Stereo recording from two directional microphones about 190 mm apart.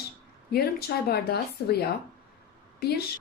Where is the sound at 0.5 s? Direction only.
55° left (ahead or behind).